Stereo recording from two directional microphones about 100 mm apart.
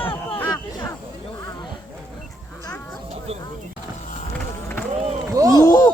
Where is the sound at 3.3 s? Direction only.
90° right.